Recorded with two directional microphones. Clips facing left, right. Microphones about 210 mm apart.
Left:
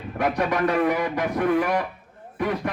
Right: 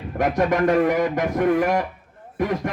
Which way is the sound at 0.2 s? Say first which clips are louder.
Right 3 dB; 45° right (ahead or behind).